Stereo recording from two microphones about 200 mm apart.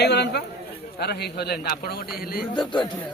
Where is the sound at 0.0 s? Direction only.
55° left (ahead or behind).